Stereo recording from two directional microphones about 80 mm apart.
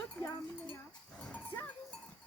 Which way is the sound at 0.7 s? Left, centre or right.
Centre.